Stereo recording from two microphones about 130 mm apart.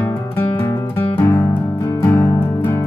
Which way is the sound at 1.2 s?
20° left (ahead or behind).